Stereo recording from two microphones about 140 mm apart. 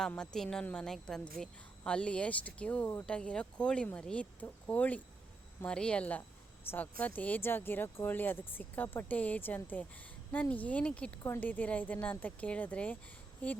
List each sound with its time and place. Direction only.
0.1 s a woman's voice: 5° left (ahead or behind)